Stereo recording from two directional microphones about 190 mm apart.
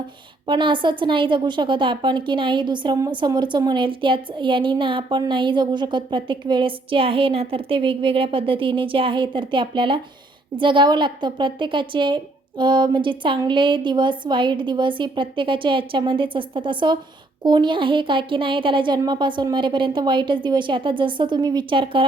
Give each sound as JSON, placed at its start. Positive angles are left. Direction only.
{"t": 0.4, "sound": "a woman's voice", "side_deg": -25}